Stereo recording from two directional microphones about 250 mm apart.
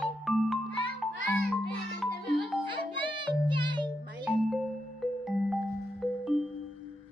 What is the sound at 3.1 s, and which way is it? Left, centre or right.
Music, centre.